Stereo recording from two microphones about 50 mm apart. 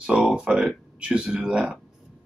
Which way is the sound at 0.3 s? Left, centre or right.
Centre.